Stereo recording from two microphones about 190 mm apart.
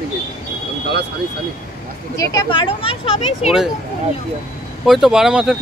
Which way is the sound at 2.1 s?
15° left (ahead or behind).